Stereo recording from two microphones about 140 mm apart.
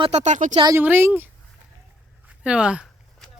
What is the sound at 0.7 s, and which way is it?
Speech, 15° right (ahead or behind).